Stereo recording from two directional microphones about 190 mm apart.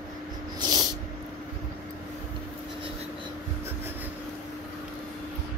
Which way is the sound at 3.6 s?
10° right (ahead or behind).